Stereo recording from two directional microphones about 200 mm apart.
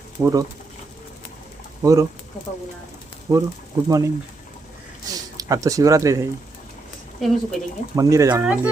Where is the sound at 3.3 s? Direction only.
15° right (ahead or behind).